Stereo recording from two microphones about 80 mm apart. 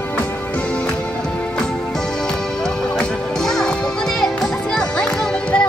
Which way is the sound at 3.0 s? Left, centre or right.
Centre.